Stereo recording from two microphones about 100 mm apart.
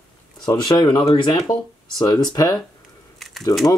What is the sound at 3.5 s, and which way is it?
Speech, 30° left (ahead or behind).